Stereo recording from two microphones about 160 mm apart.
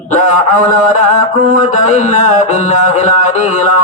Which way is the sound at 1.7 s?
50° left (ahead or behind).